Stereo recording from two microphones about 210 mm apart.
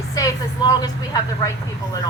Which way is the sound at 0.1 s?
15° left (ahead or behind).